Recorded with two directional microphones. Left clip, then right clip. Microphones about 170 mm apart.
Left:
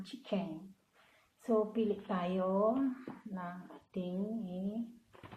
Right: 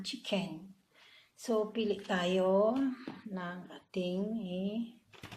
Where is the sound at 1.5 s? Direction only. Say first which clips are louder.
Even; 30° right (ahead or behind).